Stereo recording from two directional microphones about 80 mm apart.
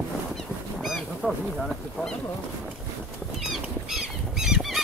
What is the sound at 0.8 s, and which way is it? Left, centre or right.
Speech, centre.